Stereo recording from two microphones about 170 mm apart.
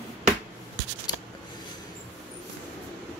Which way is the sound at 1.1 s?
25° left (ahead or behind).